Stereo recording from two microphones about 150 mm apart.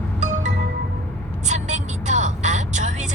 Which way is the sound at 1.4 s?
50° right (ahead or behind).